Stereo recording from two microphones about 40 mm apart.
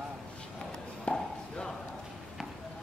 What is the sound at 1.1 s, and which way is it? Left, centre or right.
Chop, left.